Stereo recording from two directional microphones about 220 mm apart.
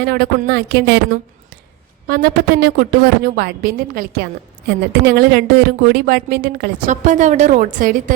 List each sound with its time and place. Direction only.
0.0 s speech: 45° right (ahead or behind)
2.0 s speech: 45° right (ahead or behind)